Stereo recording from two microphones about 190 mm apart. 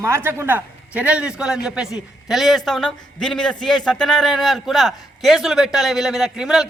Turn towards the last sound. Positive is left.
turn(degrees=-5)  # may be behind; listen again after turning